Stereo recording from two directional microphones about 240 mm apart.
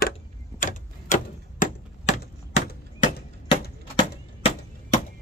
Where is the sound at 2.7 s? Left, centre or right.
Left.